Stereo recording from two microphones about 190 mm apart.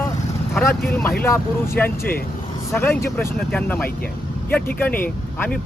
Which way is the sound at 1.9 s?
50° left (ahead or behind).